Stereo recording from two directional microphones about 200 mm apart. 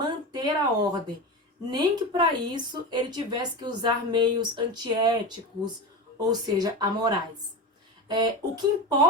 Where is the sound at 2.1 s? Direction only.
20° right (ahead or behind).